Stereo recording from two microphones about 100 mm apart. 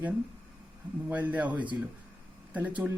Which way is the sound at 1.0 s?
15° right (ahead or behind).